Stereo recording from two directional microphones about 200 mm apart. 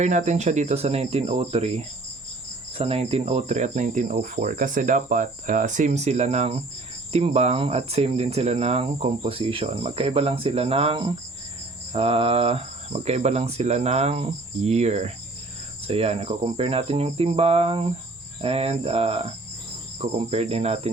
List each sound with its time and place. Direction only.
0.0 s speech: 35° right (ahead or behind)